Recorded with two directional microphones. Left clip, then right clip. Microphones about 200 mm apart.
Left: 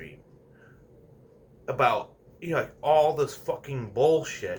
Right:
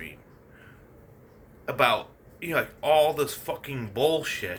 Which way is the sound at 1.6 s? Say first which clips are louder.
Right 1 dB; 15° right (ahead or behind).